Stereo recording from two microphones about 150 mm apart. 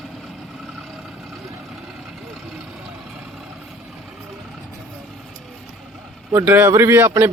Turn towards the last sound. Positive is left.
turn(degrees=-15)  # may be behind; listen again after turning